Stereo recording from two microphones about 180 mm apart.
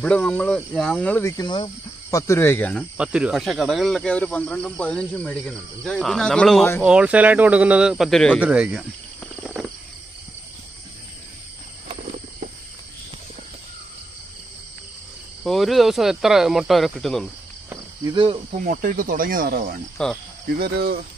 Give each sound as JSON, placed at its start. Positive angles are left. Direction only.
{"t": 0.0, "sound": "speech", "side_deg": 5}
{"t": 9.4, "sound": "cricket", "side_deg": -5}
{"t": 15.4, "sound": "speech", "side_deg": 0}
{"t": 18.1, "sound": "speech", "side_deg": -30}
{"t": 18.6, "sound": "speech", "side_deg": -45}
{"t": 20.0, "sound": "speech", "side_deg": 5}
{"t": 20.5, "sound": "speech", "side_deg": -60}